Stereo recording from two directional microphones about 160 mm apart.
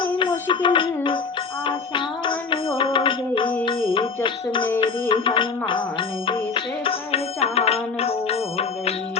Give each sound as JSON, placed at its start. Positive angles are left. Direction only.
{"t": 0.0, "sound": "music", "side_deg": 30}